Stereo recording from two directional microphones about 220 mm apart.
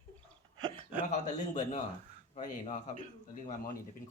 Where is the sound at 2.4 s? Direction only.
30° left (ahead or behind).